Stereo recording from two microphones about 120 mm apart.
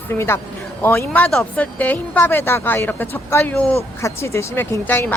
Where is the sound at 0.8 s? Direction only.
20° left (ahead or behind).